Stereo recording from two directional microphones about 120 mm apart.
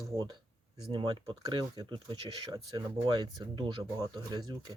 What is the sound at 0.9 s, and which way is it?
Speech, 45° right (ahead or behind).